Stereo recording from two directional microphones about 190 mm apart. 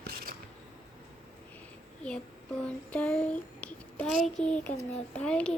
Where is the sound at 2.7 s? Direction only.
5° left (ahead or behind).